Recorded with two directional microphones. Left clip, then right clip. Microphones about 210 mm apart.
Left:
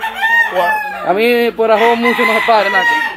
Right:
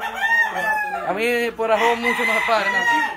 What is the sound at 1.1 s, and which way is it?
Chicken, 30° left (ahead or behind).